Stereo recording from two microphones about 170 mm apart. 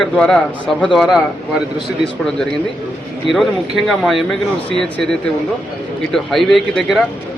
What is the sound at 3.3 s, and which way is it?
Speech, centre (ahead or behind).